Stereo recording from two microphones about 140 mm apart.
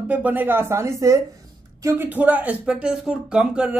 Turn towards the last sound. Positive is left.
turn(degrees=-5)  # may be behind; listen again after turning